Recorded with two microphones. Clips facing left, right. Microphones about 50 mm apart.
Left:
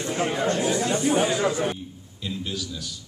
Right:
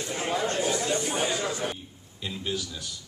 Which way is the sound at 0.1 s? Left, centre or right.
Centre.